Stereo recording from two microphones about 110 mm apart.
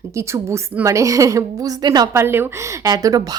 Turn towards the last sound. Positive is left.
turn(degrees=-35)  # may be behind; listen again after turning